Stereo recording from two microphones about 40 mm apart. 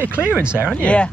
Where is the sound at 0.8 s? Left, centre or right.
Left.